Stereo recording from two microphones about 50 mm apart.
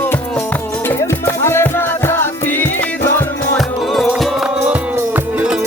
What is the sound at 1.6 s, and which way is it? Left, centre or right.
Music, left.